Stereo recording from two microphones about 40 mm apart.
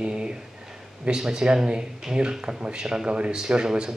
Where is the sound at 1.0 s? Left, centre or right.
Centre.